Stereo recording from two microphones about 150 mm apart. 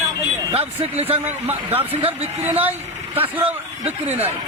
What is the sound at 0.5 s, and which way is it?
Speech, 40° right (ahead or behind).